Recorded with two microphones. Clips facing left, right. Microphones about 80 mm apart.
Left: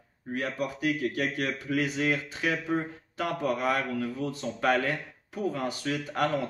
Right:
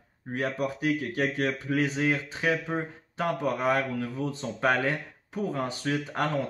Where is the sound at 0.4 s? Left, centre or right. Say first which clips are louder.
Right 2 dB; right.